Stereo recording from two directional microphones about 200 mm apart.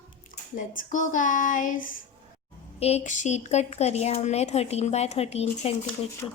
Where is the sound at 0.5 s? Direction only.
45° left (ahead or behind).